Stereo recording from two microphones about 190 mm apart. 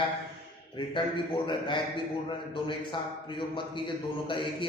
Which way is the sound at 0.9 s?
25° left (ahead or behind).